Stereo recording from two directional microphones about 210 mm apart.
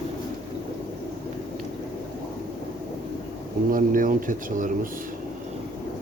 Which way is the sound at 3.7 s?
40° right (ahead or behind).